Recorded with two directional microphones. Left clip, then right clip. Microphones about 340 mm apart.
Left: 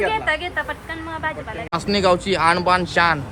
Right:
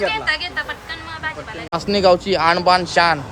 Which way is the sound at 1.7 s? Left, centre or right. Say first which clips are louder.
Right 3 dB; centre.